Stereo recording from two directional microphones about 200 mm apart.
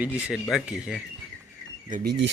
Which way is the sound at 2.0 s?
65° right (ahead or behind).